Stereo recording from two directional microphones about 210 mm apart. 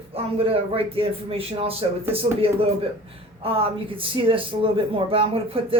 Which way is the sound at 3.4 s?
25° right (ahead or behind).